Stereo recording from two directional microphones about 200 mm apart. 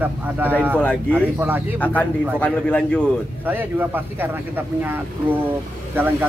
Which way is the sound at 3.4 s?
10° right (ahead or behind).